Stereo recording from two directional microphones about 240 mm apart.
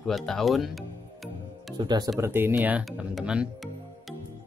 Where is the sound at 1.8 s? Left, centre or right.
Centre.